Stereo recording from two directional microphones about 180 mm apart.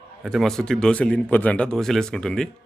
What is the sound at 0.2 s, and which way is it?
A man's voice, centre (ahead or behind).